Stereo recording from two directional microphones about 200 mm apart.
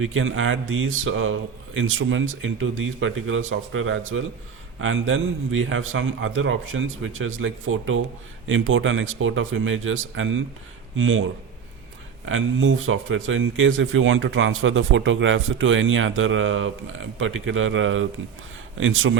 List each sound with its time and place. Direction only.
0.0 s speech: 80° right
8.4 s speech: 80° right
12.2 s speech: 75° right (ahead or behind)